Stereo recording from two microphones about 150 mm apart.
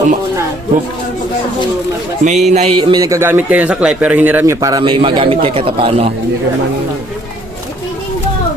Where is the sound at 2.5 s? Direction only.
45° right (ahead or behind).